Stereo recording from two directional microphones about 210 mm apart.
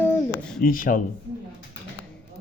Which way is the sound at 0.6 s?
40° left (ahead or behind).